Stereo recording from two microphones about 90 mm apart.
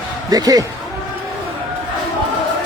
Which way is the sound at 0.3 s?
45° right (ahead or behind).